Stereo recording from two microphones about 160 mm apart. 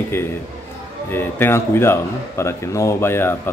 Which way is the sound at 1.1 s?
15° left (ahead or behind).